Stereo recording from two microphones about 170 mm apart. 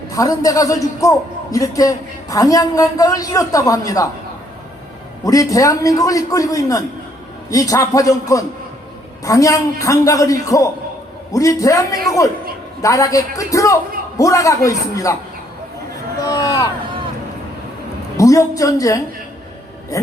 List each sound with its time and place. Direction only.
0.1 s a man's voice: 20° left (ahead or behind)
5.2 s a man's voice: 20° left (ahead or behind)
16.2 s a man's voice: 20° left (ahead or behind)
18.2 s a man's voice: 20° left (ahead or behind)